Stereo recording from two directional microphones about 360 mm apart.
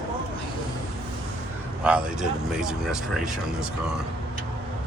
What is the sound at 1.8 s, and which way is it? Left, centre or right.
Speech, centre.